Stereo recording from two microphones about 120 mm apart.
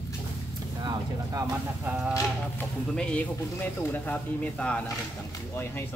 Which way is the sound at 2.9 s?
10° left (ahead or behind).